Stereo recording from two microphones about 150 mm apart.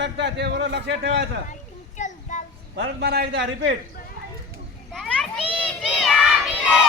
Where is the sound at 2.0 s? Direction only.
55° left (ahead or behind).